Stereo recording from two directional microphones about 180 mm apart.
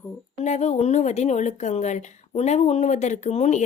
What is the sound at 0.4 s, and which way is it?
Speech, 40° left (ahead or behind).